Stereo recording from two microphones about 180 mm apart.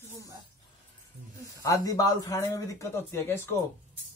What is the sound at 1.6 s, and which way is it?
Speech, 15° left (ahead or behind).